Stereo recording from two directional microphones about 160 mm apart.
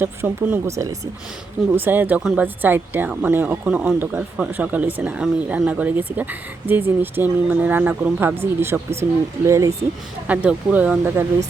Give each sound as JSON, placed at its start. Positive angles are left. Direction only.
{"t": 0.0, "sound": "speech", "side_deg": -10}